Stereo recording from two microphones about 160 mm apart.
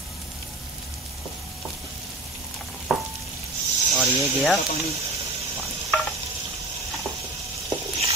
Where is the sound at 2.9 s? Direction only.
Centre (ahead or behind).